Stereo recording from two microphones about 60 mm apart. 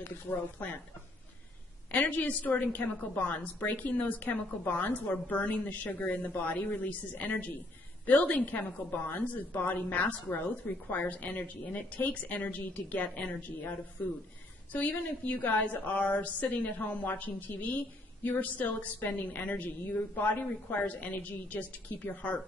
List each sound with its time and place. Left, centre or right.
0.0 s speech: left
1.9 s a woman's voice: left